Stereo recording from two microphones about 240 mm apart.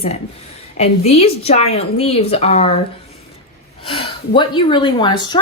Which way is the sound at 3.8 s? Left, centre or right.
Left.